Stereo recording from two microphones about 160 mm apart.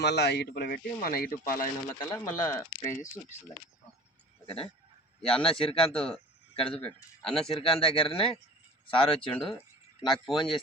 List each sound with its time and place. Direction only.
0.0 s a man's voice: 90° left
1.0 s speech: 65° left (ahead or behind)
1.5 s speech: 20° left (ahead or behind)
4.4 s speech: 35° left (ahead or behind)
6.8 s speech: 5° left (ahead or behind)
7.4 s speech: 35° left (ahead or behind)